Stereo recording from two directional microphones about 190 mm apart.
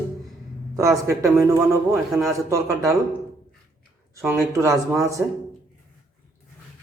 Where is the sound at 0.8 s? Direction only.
15° right (ahead or behind).